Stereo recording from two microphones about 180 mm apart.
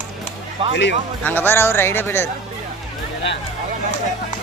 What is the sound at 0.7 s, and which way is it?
Speech, 80° left.